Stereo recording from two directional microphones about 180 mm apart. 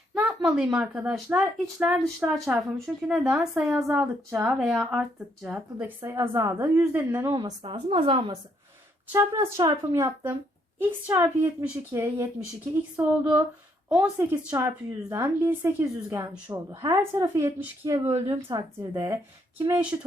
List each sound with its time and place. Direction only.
0.1 s speech: 5° right (ahead or behind)
2.8 s speech: 5° right (ahead or behind)
7.6 s a woman's voice: 30° right (ahead or behind)
9.1 s speech: 15° right (ahead or behind)